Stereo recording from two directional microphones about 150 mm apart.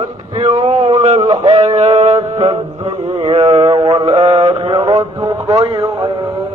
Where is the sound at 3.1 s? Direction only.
50° right (ahead or behind).